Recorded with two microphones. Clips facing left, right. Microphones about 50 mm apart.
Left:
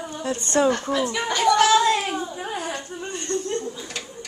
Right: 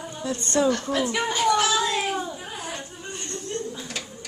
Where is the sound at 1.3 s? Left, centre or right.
Left.